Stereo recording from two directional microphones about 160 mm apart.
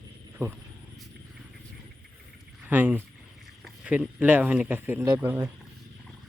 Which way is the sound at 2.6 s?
10° right (ahead or behind).